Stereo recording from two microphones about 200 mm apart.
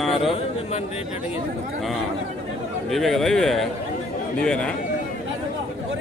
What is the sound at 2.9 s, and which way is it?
A man's voice, centre (ahead or behind).